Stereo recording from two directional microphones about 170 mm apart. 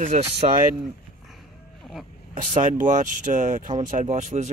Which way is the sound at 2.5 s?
45° right (ahead or behind).